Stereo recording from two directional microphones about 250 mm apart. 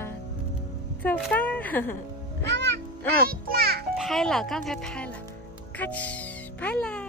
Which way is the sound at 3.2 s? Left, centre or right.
Right.